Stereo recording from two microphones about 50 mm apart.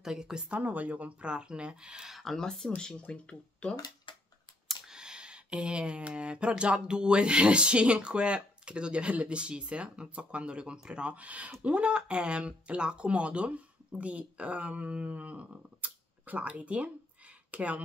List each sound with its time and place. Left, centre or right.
0.0 s a woman's voice: centre
0.5 s speech: right; by 2.1 s centre
2.1 s speech: centre
4.6 s speech: centre; by 17.8 s right